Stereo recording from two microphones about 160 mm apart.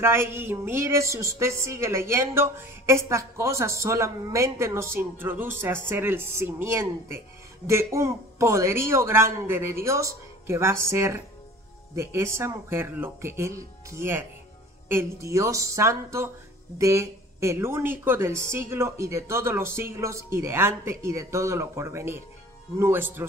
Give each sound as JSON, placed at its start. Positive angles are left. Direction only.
{"t": 0.0, "sound": "a woman's voice", "side_deg": -15}